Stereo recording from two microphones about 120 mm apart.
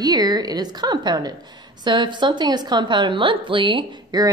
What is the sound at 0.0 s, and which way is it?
A woman's voice, 35° right (ahead or behind).